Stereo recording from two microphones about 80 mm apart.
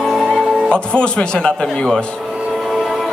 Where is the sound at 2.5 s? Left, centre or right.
Centre.